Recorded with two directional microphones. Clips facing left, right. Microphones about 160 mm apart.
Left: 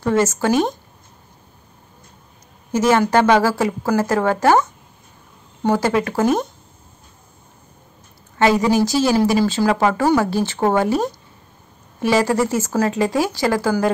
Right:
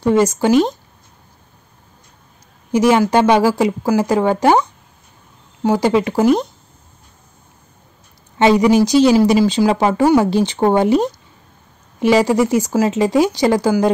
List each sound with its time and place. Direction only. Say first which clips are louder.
0.0 s a woman's voice: right 4 dB; 15° right (ahead or behind)
2.7 s a woman's voice: right 3 dB; 15° right (ahead or behind)
8.4 s a woman's voice: right 4 dB; 20° right (ahead or behind)